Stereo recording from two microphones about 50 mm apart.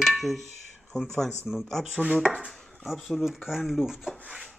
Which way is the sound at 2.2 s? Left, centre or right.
Centre.